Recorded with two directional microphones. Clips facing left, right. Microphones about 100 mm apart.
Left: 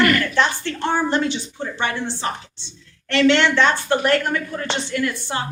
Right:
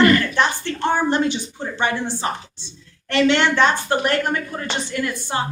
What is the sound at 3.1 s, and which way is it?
A woman's voice, 15° right (ahead or behind).